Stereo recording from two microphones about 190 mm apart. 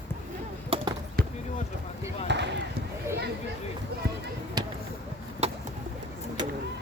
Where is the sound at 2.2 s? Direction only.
65° right (ahead or behind).